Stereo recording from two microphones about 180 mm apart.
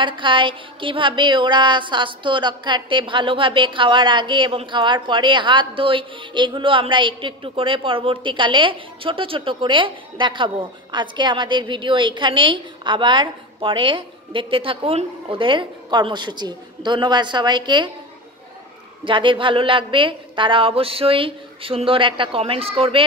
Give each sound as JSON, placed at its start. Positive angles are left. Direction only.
{"t": 0.0, "sound": "speech", "side_deg": -25}
{"t": 19.0, "sound": "speech", "side_deg": -30}